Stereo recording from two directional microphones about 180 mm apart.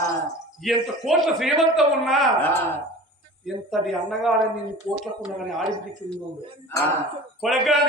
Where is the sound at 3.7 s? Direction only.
Centre (ahead or behind).